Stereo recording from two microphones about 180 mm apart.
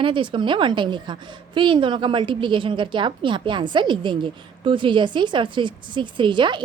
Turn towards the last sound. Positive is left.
turn(degrees=-25)  # may be behind; listen again after turning